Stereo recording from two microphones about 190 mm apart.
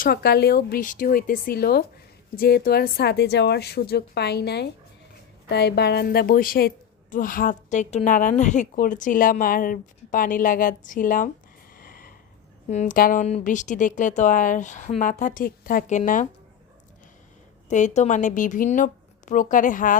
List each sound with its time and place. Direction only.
0.0 s a woman's voice: 55° left (ahead or behind)
11.7 s snort: 50° left (ahead or behind)
12.6 s a woman's voice: 40° left (ahead or behind)
17.7 s a woman's voice: 40° left (ahead or behind)